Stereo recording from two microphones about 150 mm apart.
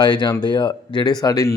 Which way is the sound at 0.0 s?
30° left (ahead or behind).